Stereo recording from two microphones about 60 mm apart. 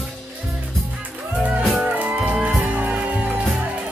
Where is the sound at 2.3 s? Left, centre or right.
Centre.